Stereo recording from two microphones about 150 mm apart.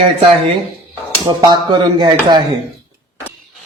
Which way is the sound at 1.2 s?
30° right (ahead or behind).